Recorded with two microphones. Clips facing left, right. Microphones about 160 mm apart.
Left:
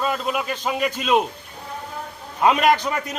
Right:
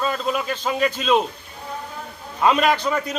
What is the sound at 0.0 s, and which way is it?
A man's voice, 10° left (ahead or behind).